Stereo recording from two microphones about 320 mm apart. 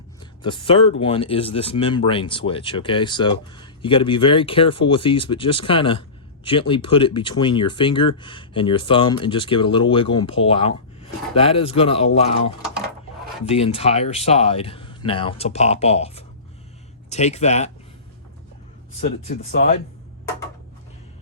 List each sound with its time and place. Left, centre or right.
0.2 s speech: centre
19.0 s speech: centre